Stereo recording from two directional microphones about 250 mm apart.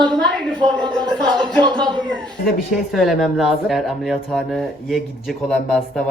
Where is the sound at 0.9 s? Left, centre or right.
Centre.